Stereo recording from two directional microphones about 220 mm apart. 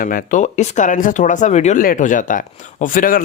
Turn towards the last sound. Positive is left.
turn(degrees=40)  # may be behind; listen again after turning